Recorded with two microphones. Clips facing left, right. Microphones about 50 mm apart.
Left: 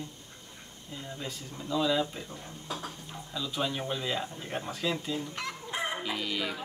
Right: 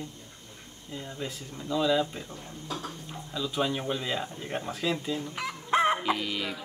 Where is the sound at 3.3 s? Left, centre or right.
Centre.